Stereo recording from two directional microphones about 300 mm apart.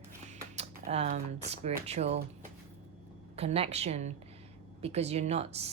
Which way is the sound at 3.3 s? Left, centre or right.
Centre.